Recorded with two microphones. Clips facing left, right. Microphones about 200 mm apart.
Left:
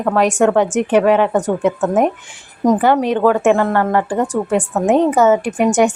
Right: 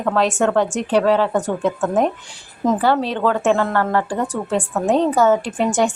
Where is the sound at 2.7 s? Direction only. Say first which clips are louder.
Left 4 dB; 15° left (ahead or behind).